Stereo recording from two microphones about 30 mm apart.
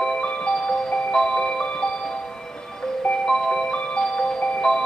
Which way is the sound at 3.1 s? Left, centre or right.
Left.